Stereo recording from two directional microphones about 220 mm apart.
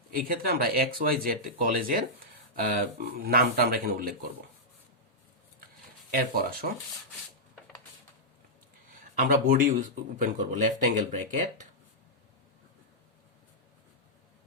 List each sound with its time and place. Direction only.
0.1 s speech: 40° right (ahead or behind)
6.1 s speech: 40° right (ahead or behind)
9.1 s speech: 40° right (ahead or behind)